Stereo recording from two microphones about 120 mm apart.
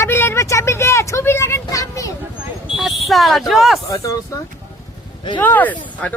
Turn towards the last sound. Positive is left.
turn(degrees=15)  # may be behind; listen again after turning